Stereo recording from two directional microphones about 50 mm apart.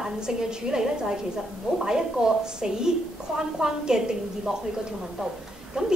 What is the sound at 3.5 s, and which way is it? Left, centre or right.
A woman's voice, centre.